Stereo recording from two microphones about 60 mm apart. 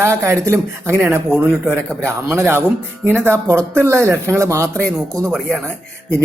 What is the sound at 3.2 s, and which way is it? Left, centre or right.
Speech, right.